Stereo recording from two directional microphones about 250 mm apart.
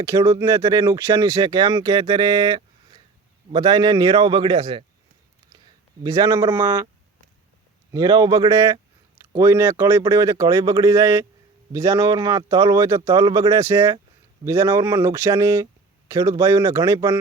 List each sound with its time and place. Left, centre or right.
0.0 s speech: centre
6.0 s speech: centre
7.9 s speech: centre